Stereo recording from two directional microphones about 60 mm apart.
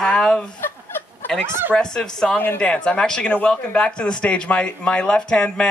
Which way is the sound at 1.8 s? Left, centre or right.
Centre.